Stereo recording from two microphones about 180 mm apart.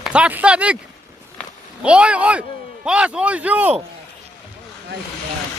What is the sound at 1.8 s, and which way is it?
Speech, 5° right (ahead or behind).